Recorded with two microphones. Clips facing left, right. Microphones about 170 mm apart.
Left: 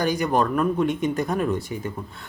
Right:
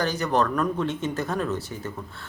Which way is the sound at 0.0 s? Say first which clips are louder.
Left 2 dB; 15° left (ahead or behind).